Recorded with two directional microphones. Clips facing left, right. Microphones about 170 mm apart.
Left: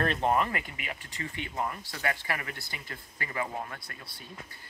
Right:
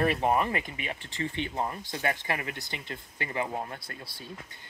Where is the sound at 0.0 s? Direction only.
10° right (ahead or behind).